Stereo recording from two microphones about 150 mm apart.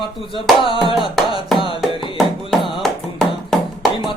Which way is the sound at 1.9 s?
35° left (ahead or behind).